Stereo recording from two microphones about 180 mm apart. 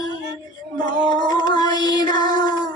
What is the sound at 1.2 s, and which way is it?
Music, 25° left (ahead or behind).